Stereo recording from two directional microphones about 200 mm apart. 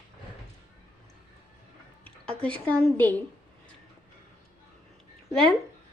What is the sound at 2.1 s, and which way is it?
A woman's voice, 5° left (ahead or behind).